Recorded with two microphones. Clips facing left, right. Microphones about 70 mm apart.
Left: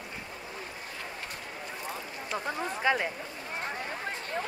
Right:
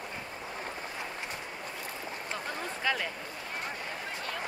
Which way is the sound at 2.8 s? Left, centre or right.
Left.